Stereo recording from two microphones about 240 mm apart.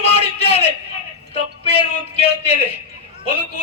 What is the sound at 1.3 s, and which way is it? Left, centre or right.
Music, left.